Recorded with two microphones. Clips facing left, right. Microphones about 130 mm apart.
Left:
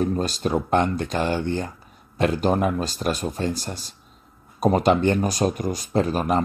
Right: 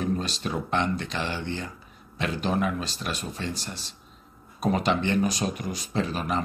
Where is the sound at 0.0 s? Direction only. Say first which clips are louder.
Left 5 dB; 45° left (ahead or behind).